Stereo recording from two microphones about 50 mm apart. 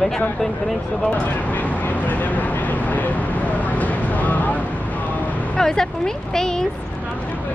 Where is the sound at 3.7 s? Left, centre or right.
Left.